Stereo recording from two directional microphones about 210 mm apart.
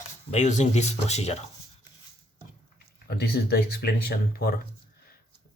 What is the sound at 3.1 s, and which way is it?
Speech, 50° left (ahead or behind).